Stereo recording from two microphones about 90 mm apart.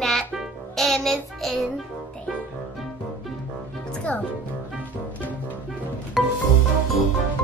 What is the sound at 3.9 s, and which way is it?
Music, 15° left (ahead or behind).